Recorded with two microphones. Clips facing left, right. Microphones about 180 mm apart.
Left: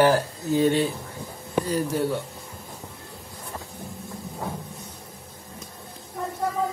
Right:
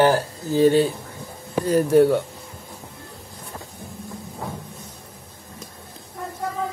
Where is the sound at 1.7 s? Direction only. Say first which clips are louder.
Right 12 dB; 60° right (ahead or behind).